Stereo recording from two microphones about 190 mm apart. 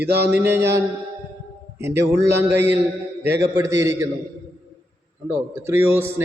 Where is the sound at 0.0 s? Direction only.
60° right (ahead or behind).